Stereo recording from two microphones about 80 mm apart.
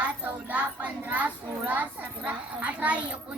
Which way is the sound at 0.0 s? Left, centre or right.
Centre.